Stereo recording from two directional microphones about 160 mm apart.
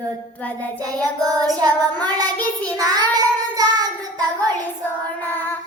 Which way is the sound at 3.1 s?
25° right (ahead or behind).